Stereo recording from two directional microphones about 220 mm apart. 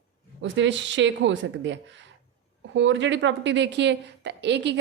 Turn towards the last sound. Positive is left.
turn(degrees=-55)  # may be behind; listen again after turning